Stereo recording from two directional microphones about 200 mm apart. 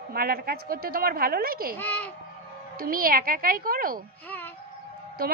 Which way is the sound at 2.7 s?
45° right (ahead or behind).